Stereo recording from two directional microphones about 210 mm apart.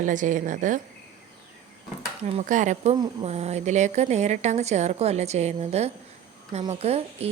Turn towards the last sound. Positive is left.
turn(degrees=-30)  # may be behind; listen again after turning